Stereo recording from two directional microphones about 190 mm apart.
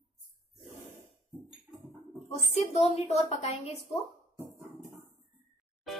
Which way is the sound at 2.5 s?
35° left (ahead or behind).